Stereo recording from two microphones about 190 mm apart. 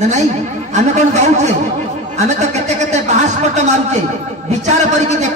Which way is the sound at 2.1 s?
35° right (ahead or behind).